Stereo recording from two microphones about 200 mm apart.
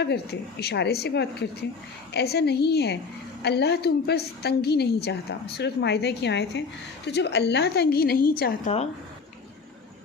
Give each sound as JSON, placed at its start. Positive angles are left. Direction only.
{"t": 0.0, "sound": "a woman's voice", "side_deg": 55}